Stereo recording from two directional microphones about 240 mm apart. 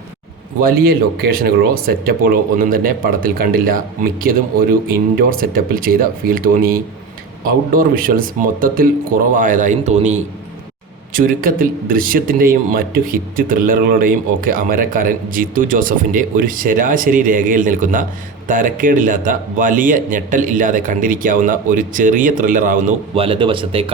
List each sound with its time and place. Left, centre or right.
0.6 s a man's voice: right